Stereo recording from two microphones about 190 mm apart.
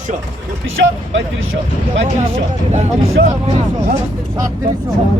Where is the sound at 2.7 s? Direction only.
40° right (ahead or behind).